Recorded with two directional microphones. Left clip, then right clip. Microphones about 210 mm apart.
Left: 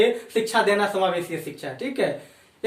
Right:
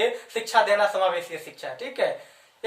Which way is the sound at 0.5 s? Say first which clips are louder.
Right 2 dB; 10° right (ahead or behind).